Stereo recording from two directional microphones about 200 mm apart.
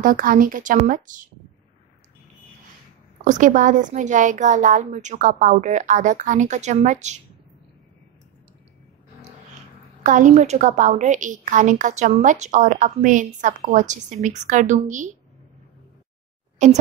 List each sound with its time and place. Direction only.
0.0 s a woman's voice: 45° right (ahead or behind)
3.3 s a woman's voice: 40° right (ahead or behind)
10.0 s a woman's voice: 40° right (ahead or behind)
16.6 s a woman's voice: 35° right (ahead or behind)